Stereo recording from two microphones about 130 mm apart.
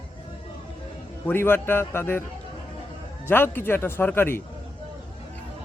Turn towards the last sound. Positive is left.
turn(degrees=15)  # may be behind; listen again after turning